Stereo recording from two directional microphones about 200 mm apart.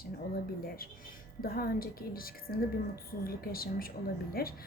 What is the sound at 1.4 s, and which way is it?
Speech, 50° left (ahead or behind).